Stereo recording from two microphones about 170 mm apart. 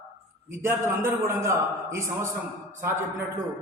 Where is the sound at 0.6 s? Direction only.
15° right (ahead or behind).